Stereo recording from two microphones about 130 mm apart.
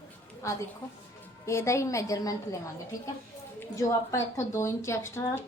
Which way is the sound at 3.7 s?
20° left (ahead or behind).